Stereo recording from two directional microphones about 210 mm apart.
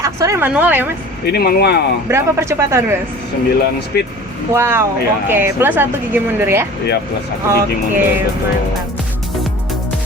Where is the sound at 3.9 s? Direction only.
50° left (ahead or behind).